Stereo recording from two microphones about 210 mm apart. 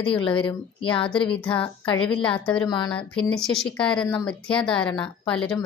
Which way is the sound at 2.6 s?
20° left (ahead or behind).